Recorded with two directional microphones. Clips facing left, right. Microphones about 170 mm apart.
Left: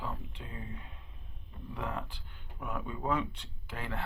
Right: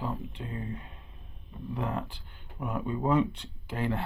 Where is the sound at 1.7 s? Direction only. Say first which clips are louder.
Right 5 dB; 35° right (ahead or behind).